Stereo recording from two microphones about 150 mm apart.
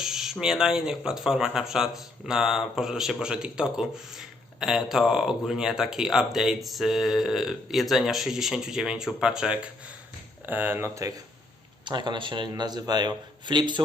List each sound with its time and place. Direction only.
0.0 s speech: 5° right (ahead or behind); by 11.1 s 20° right (ahead or behind)
11.9 s a man's voice: 30° right (ahead or behind)